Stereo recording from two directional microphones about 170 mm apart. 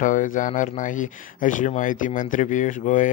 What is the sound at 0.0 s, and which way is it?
Speech, 50° left (ahead or behind).